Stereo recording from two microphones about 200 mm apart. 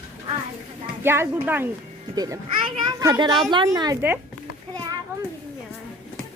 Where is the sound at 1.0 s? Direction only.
10° right (ahead or behind).